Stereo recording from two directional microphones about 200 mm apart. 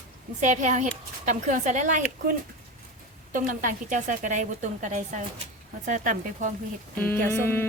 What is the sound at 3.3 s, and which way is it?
A woman's voice, 40° right (ahead or behind).